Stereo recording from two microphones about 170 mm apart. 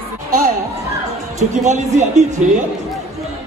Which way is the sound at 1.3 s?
45° right (ahead or behind).